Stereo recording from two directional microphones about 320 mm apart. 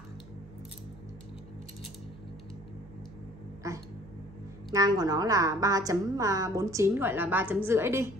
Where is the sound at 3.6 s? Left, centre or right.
Centre.